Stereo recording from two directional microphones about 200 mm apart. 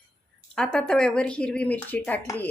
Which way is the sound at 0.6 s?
5° left (ahead or behind).